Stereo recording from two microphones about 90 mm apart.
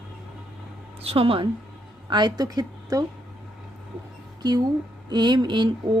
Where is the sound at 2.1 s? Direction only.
55° right (ahead or behind).